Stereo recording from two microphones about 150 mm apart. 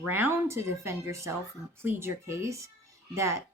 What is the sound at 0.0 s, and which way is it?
Speech, 15° right (ahead or behind).